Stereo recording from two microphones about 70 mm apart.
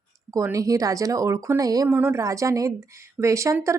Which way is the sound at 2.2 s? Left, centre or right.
Right.